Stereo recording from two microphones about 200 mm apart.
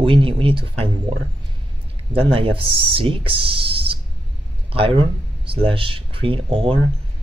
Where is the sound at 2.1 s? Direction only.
30° right (ahead or behind).